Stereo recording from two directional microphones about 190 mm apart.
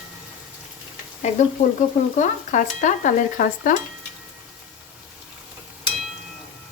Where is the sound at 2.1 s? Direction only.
40° left (ahead or behind).